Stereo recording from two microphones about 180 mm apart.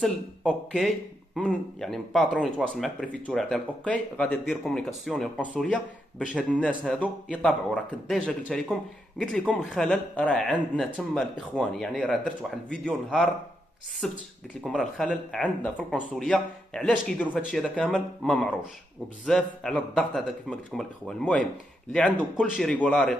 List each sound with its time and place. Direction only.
0.0 s speech: 5° left (ahead or behind)
6.7 s speech: 5° right (ahead or behind)
7.0 s speech: 5° left (ahead or behind)